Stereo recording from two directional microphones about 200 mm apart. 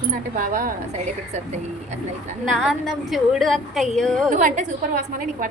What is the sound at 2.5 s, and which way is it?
A woman's voice, centre (ahead or behind).